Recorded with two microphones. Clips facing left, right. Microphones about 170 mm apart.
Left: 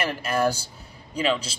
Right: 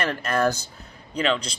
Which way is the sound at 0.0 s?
10° left (ahead or behind).